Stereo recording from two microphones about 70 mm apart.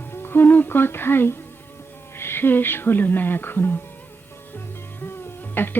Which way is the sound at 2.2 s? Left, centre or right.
Left.